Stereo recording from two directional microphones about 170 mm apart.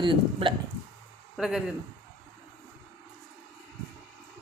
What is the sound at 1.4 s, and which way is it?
Speech, centre (ahead or behind).